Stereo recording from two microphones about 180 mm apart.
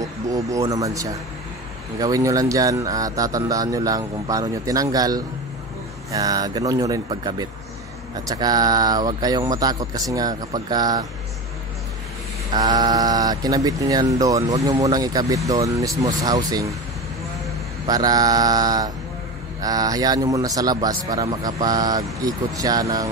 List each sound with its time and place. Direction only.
0.0 s a man's voice: 20° right (ahead or behind)
12.5 s speech: 20° right (ahead or behind)
17.8 s speech: 20° right (ahead or behind)